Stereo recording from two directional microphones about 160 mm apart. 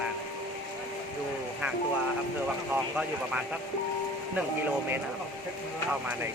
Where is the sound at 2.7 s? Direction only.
10° right (ahead or behind).